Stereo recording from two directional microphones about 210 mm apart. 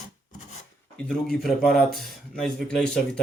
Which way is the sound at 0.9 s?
5° left (ahead or behind).